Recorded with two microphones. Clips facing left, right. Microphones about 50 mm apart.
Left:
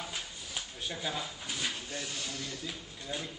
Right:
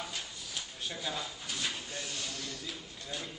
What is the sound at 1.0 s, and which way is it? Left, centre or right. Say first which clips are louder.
Speech: left 1 dB; centre.